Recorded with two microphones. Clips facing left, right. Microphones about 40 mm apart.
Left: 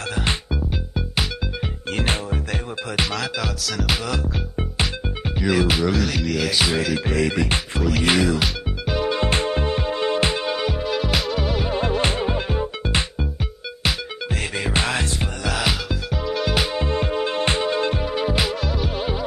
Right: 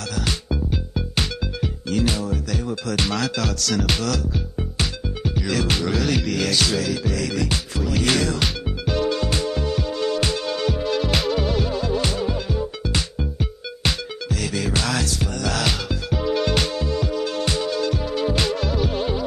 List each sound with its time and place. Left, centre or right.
0.1 s music: left
0.5 s music: centre
1.9 s music: left
3.1 s music: centre
4.1 s music: left; by 6.5 s centre
6.5 s music: left
7.1 s music: left
8.0 s music: centre
9.1 s music: left; by 11.6 s centre
11.7 s music: left
14.3 s music: left
15.4 s music: centre
15.9 s music: centre
16.7 s music: left; by 19.2 s centre